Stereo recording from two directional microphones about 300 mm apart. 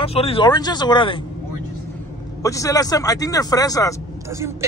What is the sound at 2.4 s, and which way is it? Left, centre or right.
Speech, centre.